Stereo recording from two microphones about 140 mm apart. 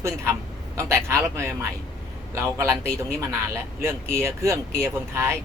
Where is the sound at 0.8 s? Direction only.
20° right (ahead or behind).